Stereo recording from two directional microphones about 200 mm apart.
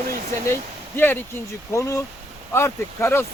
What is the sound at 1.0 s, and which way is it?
Speech, 10° left (ahead or behind).